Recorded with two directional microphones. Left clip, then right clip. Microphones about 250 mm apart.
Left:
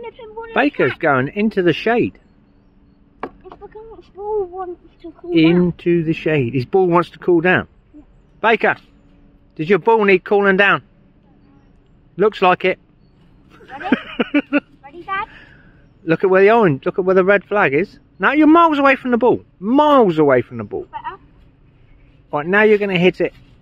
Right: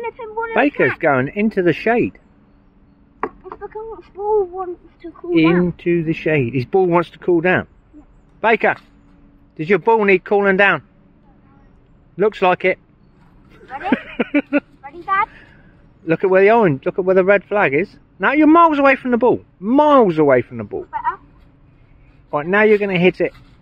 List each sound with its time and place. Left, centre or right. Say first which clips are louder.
0.5 s speech: even; centre
3.4 s a sound: right 5 dB; left
5.3 s speech: left 1 dB; centre
12.2 s speech: left 1 dB; centre
13.5 s a sound: even; centre
16.1 s speech: even; centre
22.3 s speech: even; centre